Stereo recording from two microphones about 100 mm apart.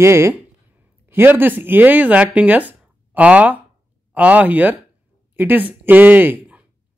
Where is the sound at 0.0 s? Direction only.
25° right (ahead or behind).